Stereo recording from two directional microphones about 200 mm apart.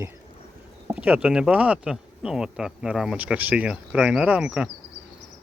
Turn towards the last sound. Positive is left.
turn(degrees=-5)  # may be behind; listen again after turning